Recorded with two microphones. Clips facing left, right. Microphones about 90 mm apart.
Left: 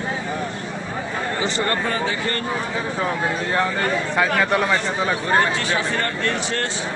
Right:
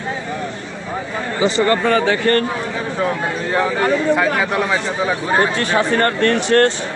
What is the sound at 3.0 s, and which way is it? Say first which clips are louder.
Speech: right 4 dB; centre (ahead or behind).